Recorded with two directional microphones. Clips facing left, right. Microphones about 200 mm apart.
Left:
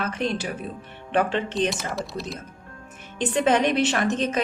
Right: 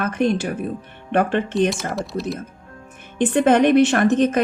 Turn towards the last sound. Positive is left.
turn(degrees=-55)  # may be behind; listen again after turning